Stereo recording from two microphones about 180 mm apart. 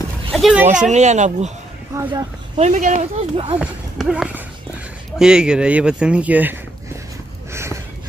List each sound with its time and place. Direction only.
0.3 s speech: centre (ahead or behind)
0.9 s speech: 40° right (ahead or behind)
1.9 s speech: 15° right (ahead or behind)
2.5 s speech: 40° right (ahead or behind)
3.5 s speech: 5° right (ahead or behind)
7.5 s a sound: 15° right (ahead or behind)